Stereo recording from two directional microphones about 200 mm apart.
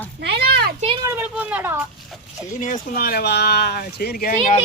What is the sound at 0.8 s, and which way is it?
Speech, 25° right (ahead or behind).